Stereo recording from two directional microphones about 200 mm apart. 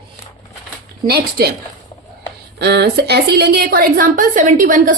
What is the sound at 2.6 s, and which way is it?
A woman's voice, 55° right (ahead or behind).